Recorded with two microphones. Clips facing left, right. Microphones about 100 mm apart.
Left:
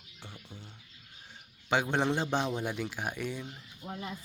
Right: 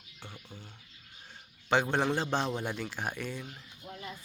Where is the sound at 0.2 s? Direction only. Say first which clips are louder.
Right 1 dB; 15° right (ahead or behind).